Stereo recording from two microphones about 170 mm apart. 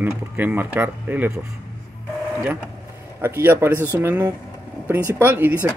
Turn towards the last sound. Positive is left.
turn(degrees=-10)  # may be behind; listen again after turning